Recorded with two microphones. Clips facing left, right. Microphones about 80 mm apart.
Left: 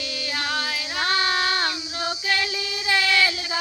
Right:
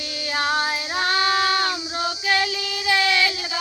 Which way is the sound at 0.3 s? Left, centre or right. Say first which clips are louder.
Right 6 dB; right.